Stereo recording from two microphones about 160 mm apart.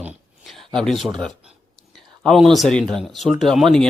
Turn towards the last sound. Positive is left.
turn(degrees=0)  # may be behind; listen again after turning